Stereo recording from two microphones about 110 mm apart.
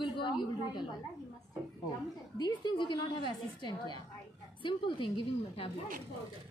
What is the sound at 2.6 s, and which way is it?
A woman's voice, 45° left (ahead or behind).